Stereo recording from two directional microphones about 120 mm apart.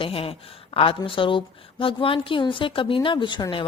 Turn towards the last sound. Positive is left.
turn(degrees=45)  # may be behind; listen again after turning